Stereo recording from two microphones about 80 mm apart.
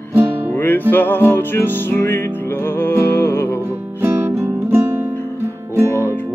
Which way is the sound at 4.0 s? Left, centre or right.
Right.